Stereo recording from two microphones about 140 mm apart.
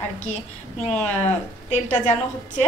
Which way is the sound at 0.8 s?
50° left (ahead or behind).